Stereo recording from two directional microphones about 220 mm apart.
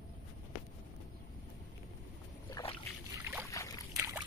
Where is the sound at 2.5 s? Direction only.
15° left (ahead or behind).